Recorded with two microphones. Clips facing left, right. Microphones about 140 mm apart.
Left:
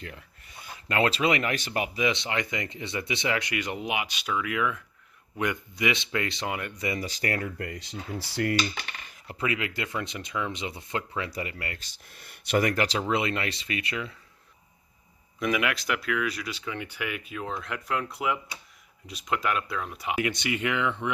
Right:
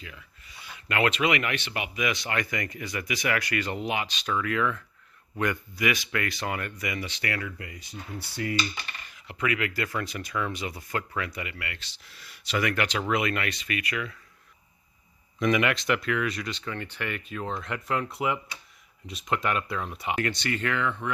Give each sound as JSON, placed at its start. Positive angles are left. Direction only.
{"t": 0.0, "sound": "speech", "side_deg": 55}
{"t": 2.0, "sound": "speech", "side_deg": 25}
{"t": 6.8, "sound": "speech", "side_deg": 35}
{"t": 7.8, "sound": "speech", "side_deg": 90}
{"t": 9.2, "sound": "speech", "side_deg": 35}
{"t": 11.3, "sound": "speech", "side_deg": 35}
{"t": 12.6, "sound": "speech", "side_deg": 35}
{"t": 15.4, "sound": "speech", "side_deg": 5}